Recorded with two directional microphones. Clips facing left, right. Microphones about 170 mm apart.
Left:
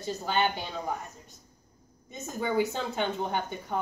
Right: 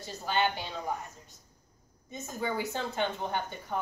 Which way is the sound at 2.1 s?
20° left (ahead or behind).